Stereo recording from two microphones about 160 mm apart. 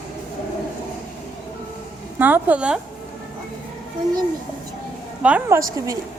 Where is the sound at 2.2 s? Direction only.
10° right (ahead or behind).